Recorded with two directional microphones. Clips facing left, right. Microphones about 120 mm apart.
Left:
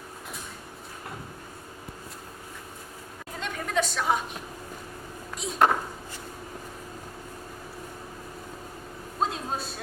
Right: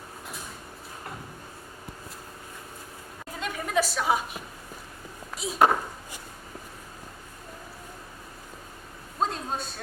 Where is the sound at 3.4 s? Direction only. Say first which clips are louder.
Right 1 dB; 5° right (ahead or behind).